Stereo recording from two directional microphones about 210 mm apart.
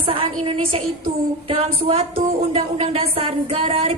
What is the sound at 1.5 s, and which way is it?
Speech, 25° right (ahead or behind).